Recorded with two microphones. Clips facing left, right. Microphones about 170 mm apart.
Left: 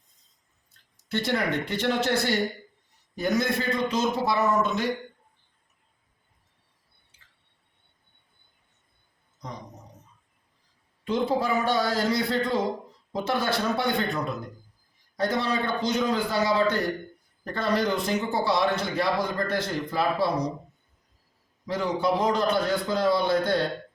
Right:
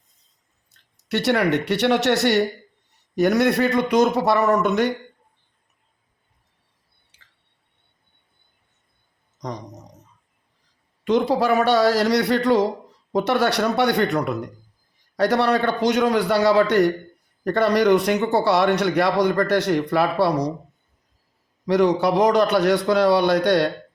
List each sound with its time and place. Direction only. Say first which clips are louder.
0.7 s a man's voice: right 5 dB; 75° right (ahead or behind)
7.1 s squish: right 4 dB; 80° right
9.4 s a sound: right 7 dB; 75° right (ahead or behind)
11.0 s a man's voice: right 6 dB; 80° right
21.7 s a man's voice: right 8 dB; 75° right (ahead or behind)